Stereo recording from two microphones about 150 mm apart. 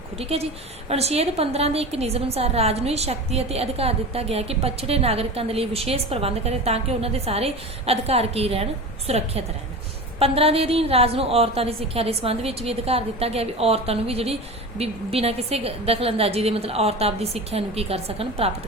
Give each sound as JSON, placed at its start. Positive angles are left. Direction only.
{"t": 0.2, "sound": "a woman's voice", "side_deg": -40}